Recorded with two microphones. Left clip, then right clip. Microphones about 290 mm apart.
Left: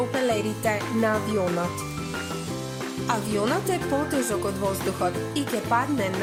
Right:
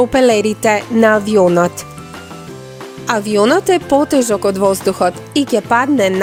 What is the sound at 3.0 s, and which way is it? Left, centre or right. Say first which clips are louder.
Speech: right 13 dB; right.